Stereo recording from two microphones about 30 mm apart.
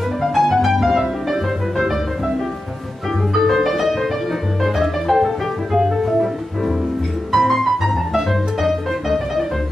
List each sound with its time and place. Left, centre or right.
0.2 s music: centre
3.3 s music: centre
7.3 s music: centre